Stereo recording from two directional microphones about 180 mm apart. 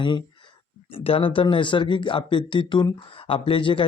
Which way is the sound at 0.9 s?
30° left (ahead or behind).